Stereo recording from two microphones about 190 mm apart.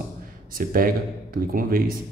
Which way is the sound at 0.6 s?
50° right (ahead or behind).